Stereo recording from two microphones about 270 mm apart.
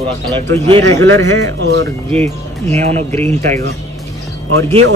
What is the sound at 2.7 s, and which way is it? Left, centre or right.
Speech, right.